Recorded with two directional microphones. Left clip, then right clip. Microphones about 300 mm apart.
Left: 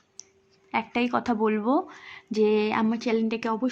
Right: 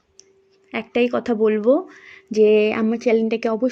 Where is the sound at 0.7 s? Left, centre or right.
Centre.